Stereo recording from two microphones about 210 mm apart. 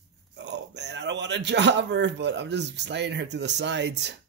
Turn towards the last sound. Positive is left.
turn(degrees=-55)  # may be behind; listen again after turning